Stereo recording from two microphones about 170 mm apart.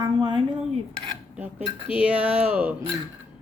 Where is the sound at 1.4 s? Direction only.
5° right (ahead or behind).